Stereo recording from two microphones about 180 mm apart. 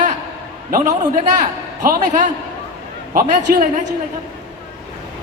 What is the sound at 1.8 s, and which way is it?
A man's voice, 45° right (ahead or behind).